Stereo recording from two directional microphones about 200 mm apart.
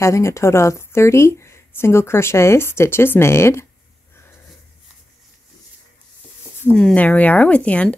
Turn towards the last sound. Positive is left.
turn(degrees=5)  # may be behind; listen again after turning